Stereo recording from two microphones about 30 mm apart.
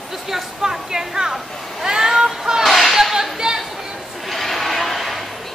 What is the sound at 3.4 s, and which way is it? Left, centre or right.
Chatter, centre.